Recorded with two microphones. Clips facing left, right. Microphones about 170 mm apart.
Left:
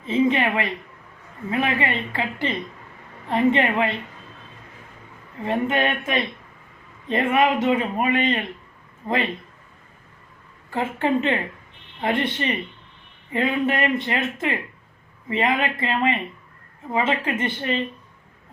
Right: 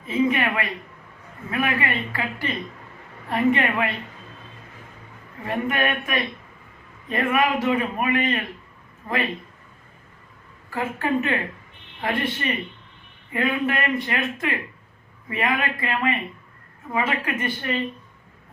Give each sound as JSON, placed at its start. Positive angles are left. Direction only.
{"t": 0.0, "sound": "a woman's voice", "side_deg": 25}
{"t": 5.5, "sound": "a man's voice", "side_deg": 25}
{"t": 10.7, "sound": "a man's voice", "side_deg": 25}